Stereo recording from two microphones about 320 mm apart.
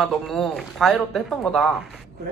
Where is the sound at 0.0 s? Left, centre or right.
Centre.